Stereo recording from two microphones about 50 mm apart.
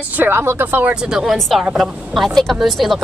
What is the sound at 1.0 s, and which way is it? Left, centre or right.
Speech, centre.